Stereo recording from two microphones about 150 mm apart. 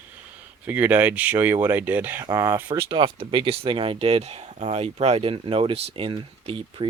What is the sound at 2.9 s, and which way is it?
Speech, 35° right (ahead or behind).